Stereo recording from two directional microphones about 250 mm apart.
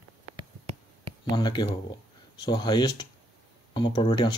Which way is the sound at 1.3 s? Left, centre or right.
Centre.